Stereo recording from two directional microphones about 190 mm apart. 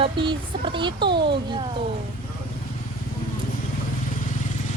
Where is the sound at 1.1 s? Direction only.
60° right (ahead or behind).